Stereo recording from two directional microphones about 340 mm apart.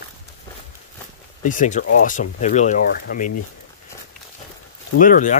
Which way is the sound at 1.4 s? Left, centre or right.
Left.